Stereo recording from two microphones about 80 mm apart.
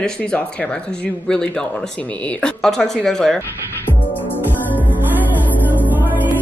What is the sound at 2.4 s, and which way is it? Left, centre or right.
Speech, centre.